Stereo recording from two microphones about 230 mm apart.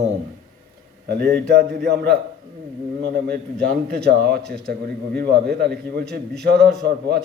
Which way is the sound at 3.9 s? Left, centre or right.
Right.